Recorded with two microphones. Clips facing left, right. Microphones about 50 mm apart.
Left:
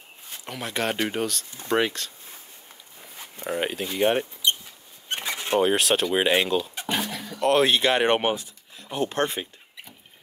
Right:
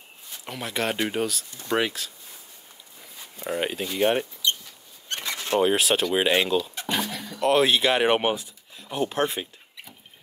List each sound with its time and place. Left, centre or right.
0.5 s speech: centre
3.4 s speech: centre
5.0 s a sound: left
5.6 s speech: centre